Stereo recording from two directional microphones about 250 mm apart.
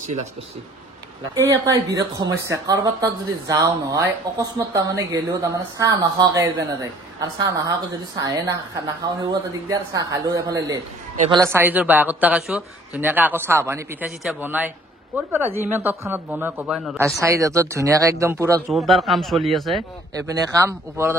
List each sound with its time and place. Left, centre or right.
1.3 s a man's voice: centre
10.2 s a man's voice: centre
11.5 s a man's voice: centre
17.0 s a man's voice: centre
18.7 s speech: centre
20.2 s a man's voice: centre